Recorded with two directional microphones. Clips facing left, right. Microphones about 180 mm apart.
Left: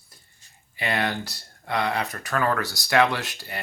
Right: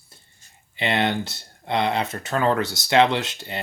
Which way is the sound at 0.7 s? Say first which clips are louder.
Right 4 dB; 25° right (ahead or behind).